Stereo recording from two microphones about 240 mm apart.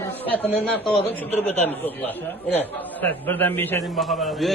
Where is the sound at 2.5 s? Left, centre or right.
Centre.